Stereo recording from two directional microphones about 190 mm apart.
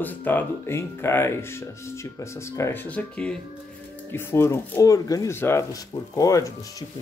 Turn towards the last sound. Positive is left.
turn(degrees=20)  # may be behind; listen again after turning